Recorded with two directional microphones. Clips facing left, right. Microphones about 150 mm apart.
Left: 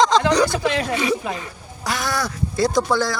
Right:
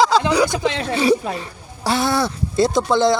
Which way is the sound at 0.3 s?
10° right (ahead or behind).